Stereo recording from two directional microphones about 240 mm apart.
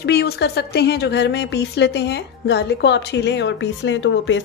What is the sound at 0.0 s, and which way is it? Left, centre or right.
Speech, left.